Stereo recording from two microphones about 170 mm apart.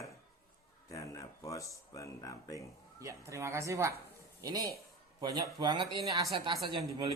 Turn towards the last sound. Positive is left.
turn(degrees=-25)  # may be behind; listen again after turning